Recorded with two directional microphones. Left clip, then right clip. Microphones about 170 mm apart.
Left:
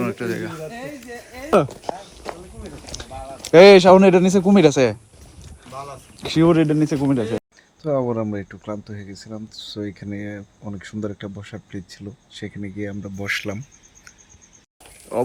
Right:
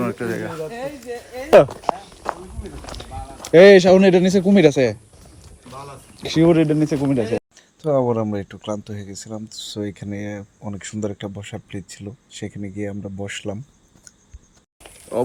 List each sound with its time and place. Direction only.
0.0 s speech: 5° left (ahead or behind)
1.8 s a sound: centre (ahead or behind)
3.6 s speech: 5° right (ahead or behind)
5.7 s a sound: centre (ahead or behind)
6.6 s speech: 60° left (ahead or behind)
6.9 s speech: 75° left (ahead or behind)
7.2 s speech: centre (ahead or behind)
7.8 s speech: 20° right (ahead or behind)
15.1 s speech: centre (ahead or behind)